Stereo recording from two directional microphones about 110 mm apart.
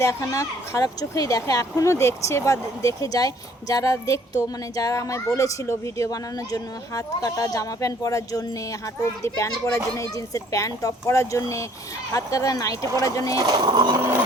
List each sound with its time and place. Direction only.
0.0 s speech: 25° left (ahead or behind)
13.4 s speech: 40° right (ahead or behind)